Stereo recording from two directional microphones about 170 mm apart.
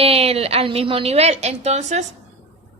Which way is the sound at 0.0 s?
35° right (ahead or behind).